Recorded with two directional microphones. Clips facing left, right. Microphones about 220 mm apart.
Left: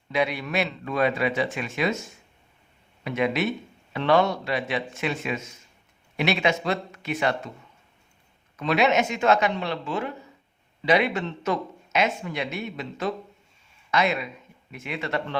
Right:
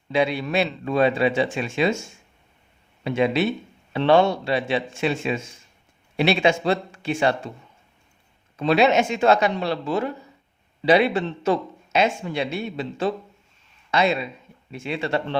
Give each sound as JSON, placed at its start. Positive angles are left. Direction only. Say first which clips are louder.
{"t": 0.1, "sound": "speech", "louder": "right 4 dB", "side_deg": -30}
{"t": 8.5, "sound": "speech", "louder": "right 4 dB", "side_deg": -30}